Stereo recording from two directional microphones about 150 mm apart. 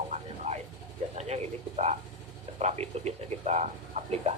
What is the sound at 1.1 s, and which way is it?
Speech, 45° right (ahead or behind).